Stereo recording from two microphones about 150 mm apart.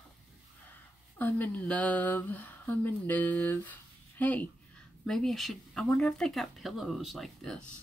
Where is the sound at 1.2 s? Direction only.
10° left (ahead or behind).